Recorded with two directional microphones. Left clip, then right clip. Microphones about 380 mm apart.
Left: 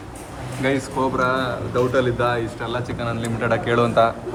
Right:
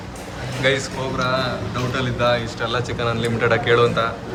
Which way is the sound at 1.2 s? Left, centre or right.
Centre.